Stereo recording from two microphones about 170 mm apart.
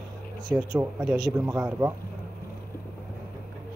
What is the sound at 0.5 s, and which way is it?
Speech, 10° right (ahead or behind).